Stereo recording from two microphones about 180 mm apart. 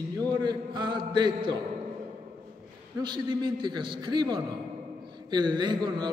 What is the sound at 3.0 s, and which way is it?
A man's voice, 25° right (ahead or behind).